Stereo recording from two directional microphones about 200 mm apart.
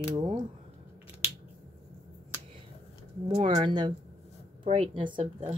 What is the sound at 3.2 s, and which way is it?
Speech, 25° right (ahead or behind).